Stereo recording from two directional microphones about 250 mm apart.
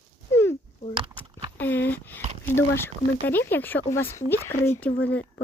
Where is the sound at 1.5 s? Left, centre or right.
Centre.